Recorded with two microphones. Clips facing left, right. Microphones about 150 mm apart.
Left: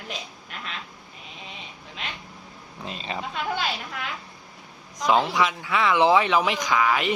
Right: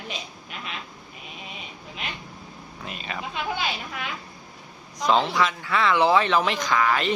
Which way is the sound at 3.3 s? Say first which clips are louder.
Even; 5° right (ahead or behind).